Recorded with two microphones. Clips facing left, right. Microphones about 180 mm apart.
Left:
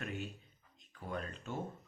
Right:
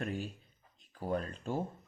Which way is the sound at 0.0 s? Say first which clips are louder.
Right 5 dB; 35° right (ahead or behind).